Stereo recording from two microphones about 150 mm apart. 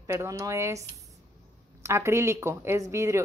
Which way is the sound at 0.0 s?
20° right (ahead or behind).